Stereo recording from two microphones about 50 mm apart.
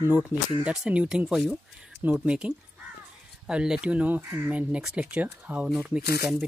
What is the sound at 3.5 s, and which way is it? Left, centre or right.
Speech, centre.